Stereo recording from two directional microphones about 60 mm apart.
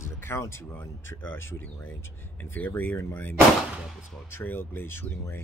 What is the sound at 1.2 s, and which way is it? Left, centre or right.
Speech, left.